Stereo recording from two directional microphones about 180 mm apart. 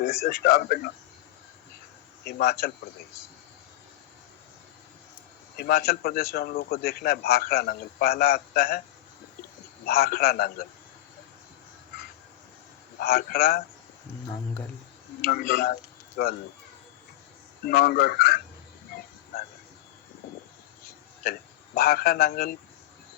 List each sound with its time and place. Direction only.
0.0 s a man's voice: 55° left (ahead or behind)
2.2 s a man's voice: 60° left (ahead or behind)
5.5 s a man's voice: 55° left (ahead or behind)
9.8 s a man's voice: 60° left (ahead or behind)
13.0 s a man's voice: 60° left (ahead or behind)
15.2 s a man's voice: 55° left (ahead or behind)
17.7 s a man's voice: 60° left (ahead or behind)
21.8 s a man's voice: 60° left (ahead or behind)